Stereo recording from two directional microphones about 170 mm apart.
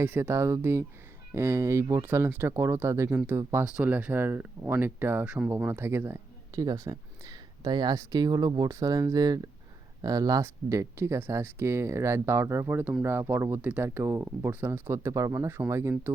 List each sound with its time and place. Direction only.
0.0 s speech: 15° right (ahead or behind)